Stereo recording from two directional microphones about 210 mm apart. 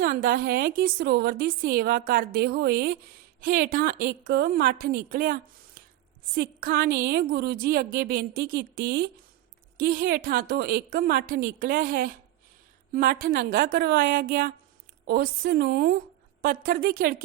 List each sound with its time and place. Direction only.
0.0 s a woman's voice: 45° right (ahead or behind)